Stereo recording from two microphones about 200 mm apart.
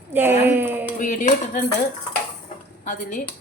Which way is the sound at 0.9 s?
40° left (ahead or behind).